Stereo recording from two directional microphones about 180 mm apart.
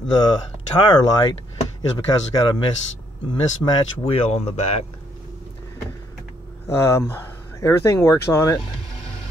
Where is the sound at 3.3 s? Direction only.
25° left (ahead or behind).